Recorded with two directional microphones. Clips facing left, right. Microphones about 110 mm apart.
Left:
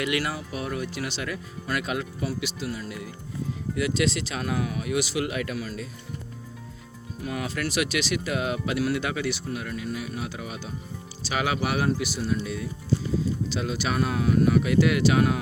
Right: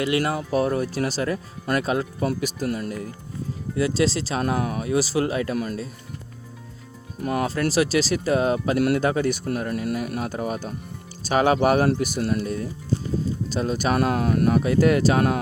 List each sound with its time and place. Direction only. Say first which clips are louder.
0.0 s speech: right 5 dB; 30° right (ahead or behind)
0.3 s speech: right 9 dB; 40° right (ahead or behind)
3.8 s speech: right 4 dB; 30° right (ahead or behind)
7.2 s speech: right 7 dB; 45° right (ahead or behind)